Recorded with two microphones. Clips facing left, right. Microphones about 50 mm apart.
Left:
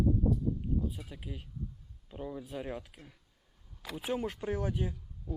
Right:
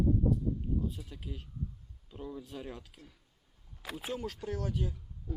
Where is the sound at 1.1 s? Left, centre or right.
Centre.